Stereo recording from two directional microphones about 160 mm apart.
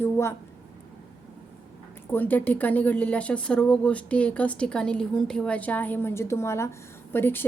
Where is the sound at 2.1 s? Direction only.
10° left (ahead or behind).